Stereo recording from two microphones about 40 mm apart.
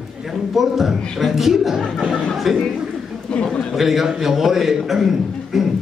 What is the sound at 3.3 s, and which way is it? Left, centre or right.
Speech, left.